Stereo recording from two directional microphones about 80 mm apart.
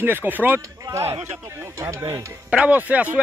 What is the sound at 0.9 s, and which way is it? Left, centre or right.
Speech, right.